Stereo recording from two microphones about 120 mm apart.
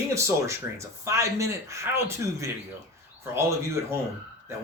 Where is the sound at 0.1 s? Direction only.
25° right (ahead or behind).